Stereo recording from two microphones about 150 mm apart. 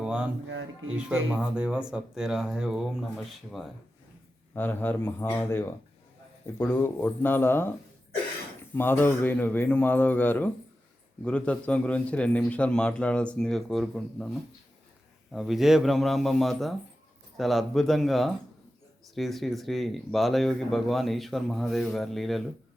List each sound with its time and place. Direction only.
0.0 s music: 5° right (ahead or behind)
0.9 s speech: 5° right (ahead or behind)
4.5 s a man's voice: 10° left (ahead or behind)
8.7 s a man's voice: 15° left (ahead or behind)
15.3 s speech: centre (ahead or behind)